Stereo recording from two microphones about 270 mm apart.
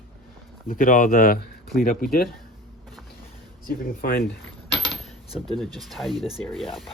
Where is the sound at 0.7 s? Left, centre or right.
Left.